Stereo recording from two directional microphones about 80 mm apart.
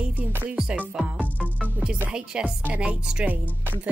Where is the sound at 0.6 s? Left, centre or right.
Centre.